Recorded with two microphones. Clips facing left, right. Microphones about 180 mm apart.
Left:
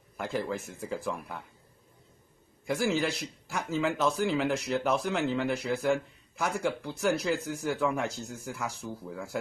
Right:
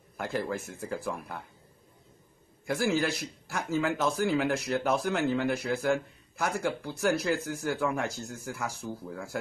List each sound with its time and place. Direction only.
0.2 s a man's voice: centre (ahead or behind)
2.6 s a man's voice: centre (ahead or behind)